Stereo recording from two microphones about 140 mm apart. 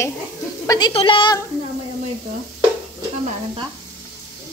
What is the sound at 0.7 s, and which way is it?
Speech, 30° left (ahead or behind).